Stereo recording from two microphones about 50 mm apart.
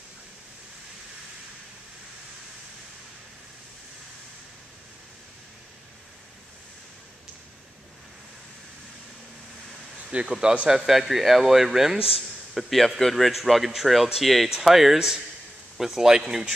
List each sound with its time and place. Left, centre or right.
10.3 s speech: centre
10.7 s a man's voice: centre